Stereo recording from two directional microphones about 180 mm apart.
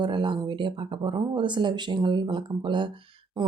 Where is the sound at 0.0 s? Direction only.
25° right (ahead or behind).